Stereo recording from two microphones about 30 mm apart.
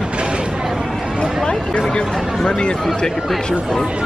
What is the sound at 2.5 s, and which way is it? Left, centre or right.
Speech, left.